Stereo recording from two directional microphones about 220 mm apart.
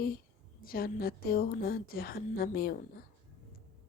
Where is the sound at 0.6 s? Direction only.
40° left (ahead or behind).